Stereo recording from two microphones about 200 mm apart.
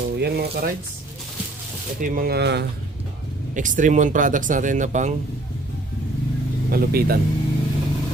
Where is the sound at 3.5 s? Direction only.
40° right (ahead or behind).